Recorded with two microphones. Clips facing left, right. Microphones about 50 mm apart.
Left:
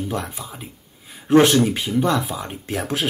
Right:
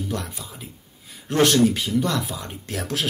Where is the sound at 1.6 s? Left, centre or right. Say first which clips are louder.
Left 1 dB; left.